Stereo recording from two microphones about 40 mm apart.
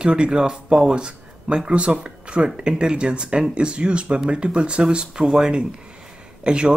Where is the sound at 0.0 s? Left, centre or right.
Right.